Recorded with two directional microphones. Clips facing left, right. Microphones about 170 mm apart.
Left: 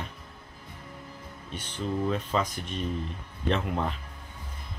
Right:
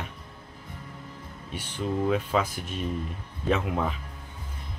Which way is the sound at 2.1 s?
5° right (ahead or behind).